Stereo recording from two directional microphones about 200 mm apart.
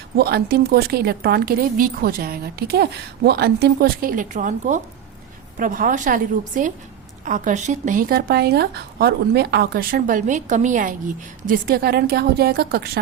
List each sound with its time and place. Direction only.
0.2 s speech: 50° right (ahead or behind)